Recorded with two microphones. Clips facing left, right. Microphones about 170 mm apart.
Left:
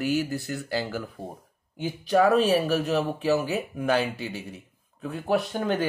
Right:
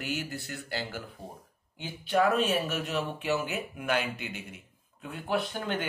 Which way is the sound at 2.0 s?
40° left (ahead or behind).